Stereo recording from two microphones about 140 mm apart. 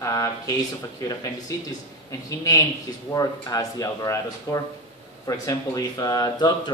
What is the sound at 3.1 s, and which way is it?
Speech, 25° left (ahead or behind).